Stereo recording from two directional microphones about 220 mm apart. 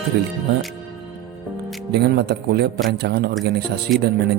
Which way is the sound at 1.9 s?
50° right (ahead or behind).